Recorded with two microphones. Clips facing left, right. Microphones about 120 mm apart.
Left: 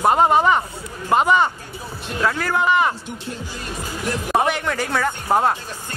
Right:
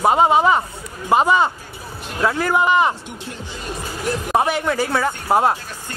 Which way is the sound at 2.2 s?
15° right (ahead or behind).